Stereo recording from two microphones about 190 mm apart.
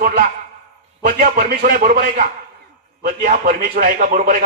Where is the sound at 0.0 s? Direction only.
50° right (ahead or behind).